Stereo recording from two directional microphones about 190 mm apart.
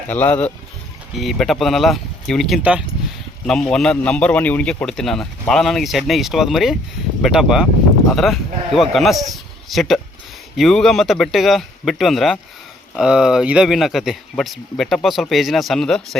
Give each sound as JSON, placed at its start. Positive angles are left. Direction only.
{"t": 0.1, "sound": "a man's voice", "side_deg": 10}